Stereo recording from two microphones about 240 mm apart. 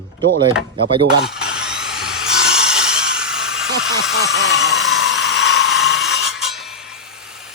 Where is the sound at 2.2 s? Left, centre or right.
Left.